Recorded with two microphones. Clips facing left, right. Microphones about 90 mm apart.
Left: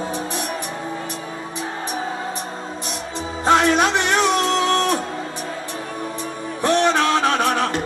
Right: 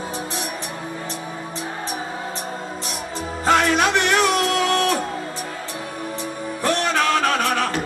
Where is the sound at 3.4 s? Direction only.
20° left (ahead or behind).